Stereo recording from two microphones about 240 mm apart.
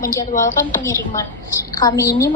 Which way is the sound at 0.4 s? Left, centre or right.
Centre.